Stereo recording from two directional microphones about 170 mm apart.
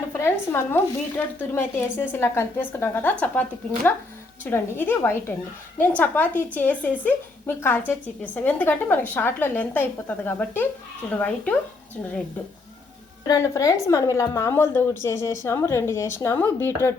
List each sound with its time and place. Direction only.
0.1 s a woman's voice: 15° left (ahead or behind)
4.4 s a woman's voice: 10° left (ahead or behind)
13.2 s a woman's voice: 20° left (ahead or behind)